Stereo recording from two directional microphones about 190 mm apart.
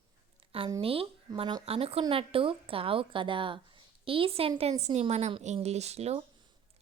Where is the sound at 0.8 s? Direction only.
30° right (ahead or behind).